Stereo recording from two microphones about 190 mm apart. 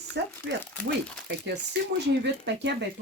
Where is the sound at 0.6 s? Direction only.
10° left (ahead or behind).